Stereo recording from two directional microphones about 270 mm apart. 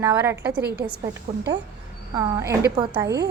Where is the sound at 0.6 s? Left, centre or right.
Right.